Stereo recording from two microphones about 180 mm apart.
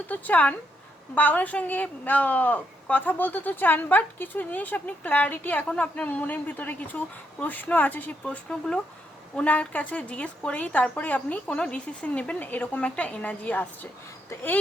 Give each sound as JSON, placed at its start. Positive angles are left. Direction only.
{"t": 0.1, "sound": "a woman's voice", "side_deg": 10}